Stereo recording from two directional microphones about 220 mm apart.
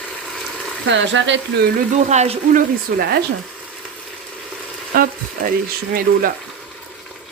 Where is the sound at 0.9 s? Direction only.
55° right (ahead or behind).